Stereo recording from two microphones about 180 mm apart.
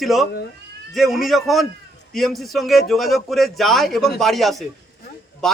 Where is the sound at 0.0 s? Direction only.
Centre (ahead or behind).